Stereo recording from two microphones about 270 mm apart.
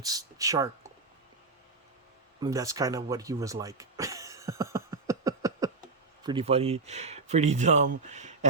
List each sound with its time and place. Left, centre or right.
0.0 s speech: centre
2.4 s a sound: centre
6.2 s speech: right